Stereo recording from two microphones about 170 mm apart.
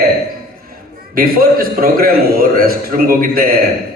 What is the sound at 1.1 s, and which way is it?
A man's voice, 60° right (ahead or behind).